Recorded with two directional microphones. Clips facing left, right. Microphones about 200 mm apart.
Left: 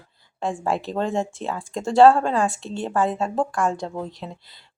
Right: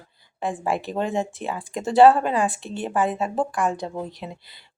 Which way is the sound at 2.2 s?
5° right (ahead or behind).